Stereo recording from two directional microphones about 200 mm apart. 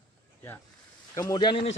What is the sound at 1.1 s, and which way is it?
Speech, 20° left (ahead or behind).